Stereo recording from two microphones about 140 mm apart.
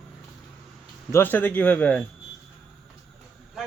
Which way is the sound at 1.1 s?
15° left (ahead or behind).